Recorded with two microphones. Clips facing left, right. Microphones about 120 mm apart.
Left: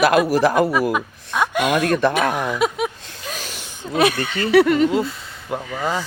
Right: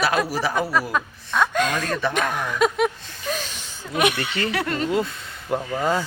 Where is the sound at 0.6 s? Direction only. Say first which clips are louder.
Left 4 dB; 15° left (ahead or behind).